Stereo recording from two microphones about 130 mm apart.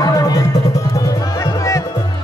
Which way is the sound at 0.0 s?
30° left (ahead or behind).